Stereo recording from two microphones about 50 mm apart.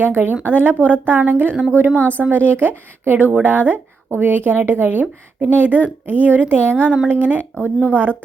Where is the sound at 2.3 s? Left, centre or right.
Right.